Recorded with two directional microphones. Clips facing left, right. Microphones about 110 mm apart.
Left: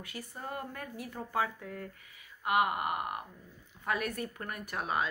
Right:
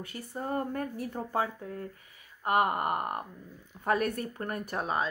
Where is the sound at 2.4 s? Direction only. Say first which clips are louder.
Right 3 dB; 40° right (ahead or behind).